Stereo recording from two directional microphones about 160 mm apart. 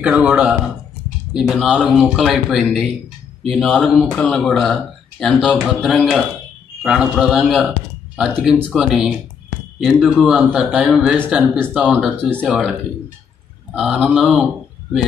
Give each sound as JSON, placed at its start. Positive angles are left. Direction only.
{"t": 0.0, "sound": "a man's voice", "side_deg": -10}
{"t": 13.7, "sound": "speech", "side_deg": -5}